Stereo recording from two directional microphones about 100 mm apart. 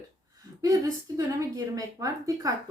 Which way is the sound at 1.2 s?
35° right (ahead or behind).